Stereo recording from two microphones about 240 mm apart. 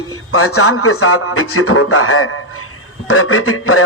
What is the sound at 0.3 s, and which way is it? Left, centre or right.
A man's voice, left.